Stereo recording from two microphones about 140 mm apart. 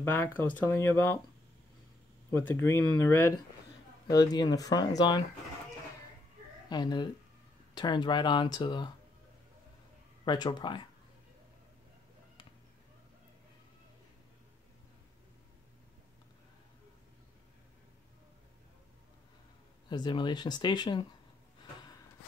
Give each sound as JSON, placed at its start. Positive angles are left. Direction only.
{"t": 0.0, "sound": "speech", "side_deg": 15}
{"t": 2.3, "sound": "speech", "side_deg": 15}
{"t": 4.1, "sound": "speech", "side_deg": 25}
{"t": 6.7, "sound": "speech", "side_deg": 30}
{"t": 10.2, "sound": "speech", "side_deg": 30}
{"t": 19.9, "sound": "speech", "side_deg": 30}